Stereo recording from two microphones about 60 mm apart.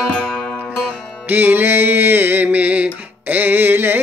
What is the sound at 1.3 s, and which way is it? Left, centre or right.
Music, right.